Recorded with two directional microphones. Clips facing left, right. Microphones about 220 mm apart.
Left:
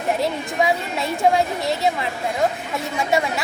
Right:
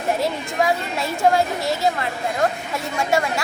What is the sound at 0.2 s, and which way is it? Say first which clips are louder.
A woman's voice: even; centre (ahead or behind).